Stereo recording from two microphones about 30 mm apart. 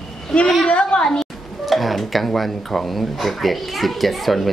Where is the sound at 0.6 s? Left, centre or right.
Left.